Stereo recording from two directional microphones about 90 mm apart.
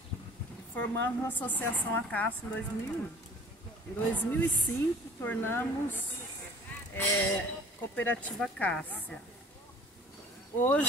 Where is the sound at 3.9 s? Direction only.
20° left (ahead or behind).